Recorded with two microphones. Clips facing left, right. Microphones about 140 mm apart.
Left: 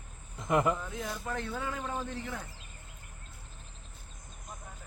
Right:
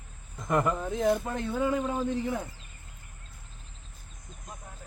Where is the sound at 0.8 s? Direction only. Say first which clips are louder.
Right 12 dB; 50° right (ahead or behind).